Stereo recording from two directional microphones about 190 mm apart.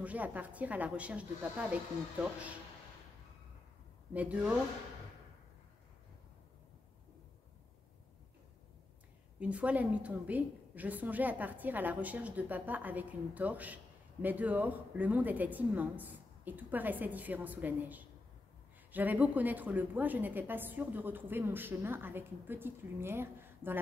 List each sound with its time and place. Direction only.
0.0 s a woman's voice: 10° right (ahead or behind)
4.1 s a woman's voice: 5° right (ahead or behind)
9.4 s a woman's voice: 5° right (ahead or behind)